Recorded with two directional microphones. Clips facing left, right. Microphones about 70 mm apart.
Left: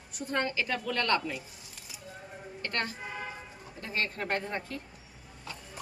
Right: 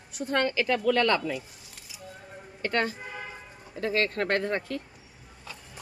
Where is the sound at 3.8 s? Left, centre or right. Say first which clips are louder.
Right 7 dB; right.